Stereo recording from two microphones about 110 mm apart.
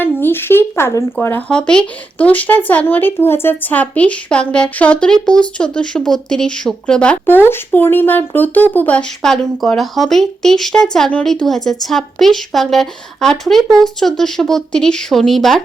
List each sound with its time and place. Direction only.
0.0 s a woman's voice: 20° left (ahead or behind); by 15.6 s centre (ahead or behind)